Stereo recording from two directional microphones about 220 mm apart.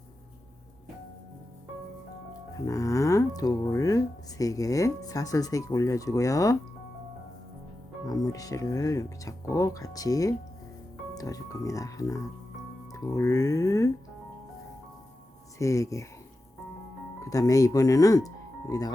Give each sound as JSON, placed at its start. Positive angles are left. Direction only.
{"t": 2.6, "sound": "speech", "side_deg": 15}
{"t": 8.0, "sound": "speech", "side_deg": 15}
{"t": 15.5, "sound": "speech", "side_deg": 15}
{"t": 17.2, "sound": "speech", "side_deg": 15}